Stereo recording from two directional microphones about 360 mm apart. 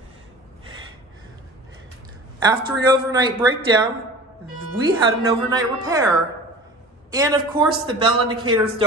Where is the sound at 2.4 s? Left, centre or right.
Centre.